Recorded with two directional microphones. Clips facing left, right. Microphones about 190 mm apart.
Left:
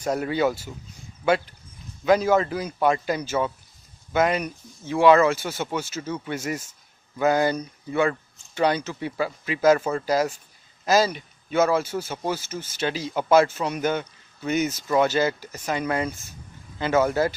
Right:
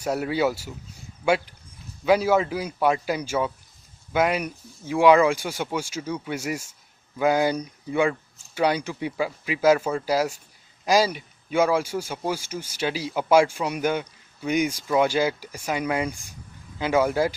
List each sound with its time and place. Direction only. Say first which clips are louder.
0.0 s a man's voice: even; 10° right (ahead or behind)
2.0 s a man's voice: even; 10° right (ahead or behind)